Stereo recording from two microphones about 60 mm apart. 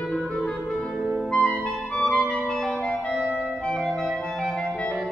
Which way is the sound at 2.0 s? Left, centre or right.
Centre.